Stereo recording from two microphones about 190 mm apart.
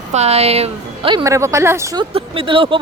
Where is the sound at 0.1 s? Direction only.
35° right (ahead or behind).